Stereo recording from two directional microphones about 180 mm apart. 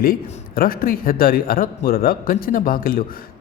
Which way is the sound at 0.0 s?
55° left (ahead or behind).